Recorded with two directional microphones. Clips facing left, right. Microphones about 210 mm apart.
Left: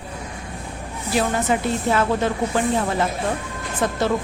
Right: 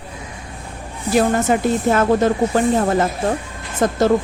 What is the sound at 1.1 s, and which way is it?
Speech, 50° right (ahead or behind).